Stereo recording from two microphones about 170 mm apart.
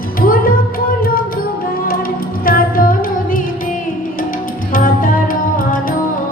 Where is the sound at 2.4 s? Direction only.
60° left (ahead or behind).